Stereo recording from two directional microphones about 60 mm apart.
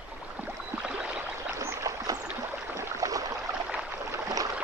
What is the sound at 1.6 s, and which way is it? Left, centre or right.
Boat, right.